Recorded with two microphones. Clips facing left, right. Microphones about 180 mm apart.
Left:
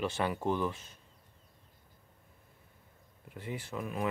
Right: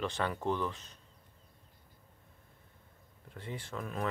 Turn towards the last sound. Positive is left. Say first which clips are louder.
# left 2 dB
turn(degrees=15)  # may be behind; listen again after turning